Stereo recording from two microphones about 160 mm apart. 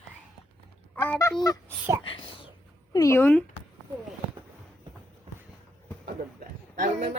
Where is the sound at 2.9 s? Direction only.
20° left (ahead or behind).